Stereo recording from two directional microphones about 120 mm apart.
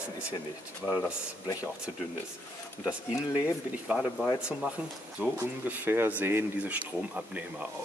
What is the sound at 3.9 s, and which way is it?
Speech, 10° left (ahead or behind).